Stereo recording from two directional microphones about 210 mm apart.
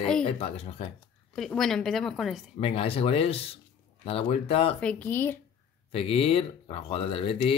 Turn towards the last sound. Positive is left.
turn(degrees=25)  # may be behind; listen again after turning